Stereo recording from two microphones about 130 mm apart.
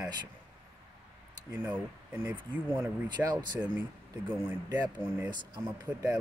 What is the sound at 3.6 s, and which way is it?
Speech, 15° right (ahead or behind).